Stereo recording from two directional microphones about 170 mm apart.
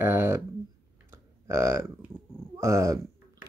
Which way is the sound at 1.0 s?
15° right (ahead or behind).